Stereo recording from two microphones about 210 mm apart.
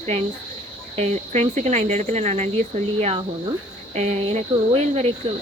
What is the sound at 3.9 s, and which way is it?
Speech, 30° right (ahead or behind).